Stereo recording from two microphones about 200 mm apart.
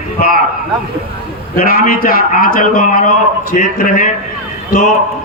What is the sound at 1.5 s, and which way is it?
A man's voice, 45° left (ahead or behind).